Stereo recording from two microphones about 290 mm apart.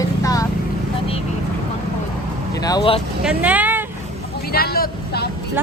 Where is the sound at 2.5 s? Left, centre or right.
Centre.